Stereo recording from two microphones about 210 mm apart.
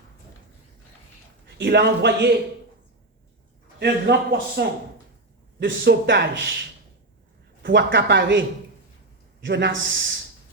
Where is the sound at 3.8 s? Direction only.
55° right (ahead or behind).